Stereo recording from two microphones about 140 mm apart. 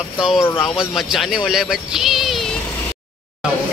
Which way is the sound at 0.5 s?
35° left (ahead or behind).